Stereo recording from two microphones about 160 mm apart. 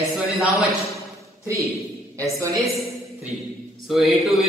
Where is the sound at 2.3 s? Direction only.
20° right (ahead or behind).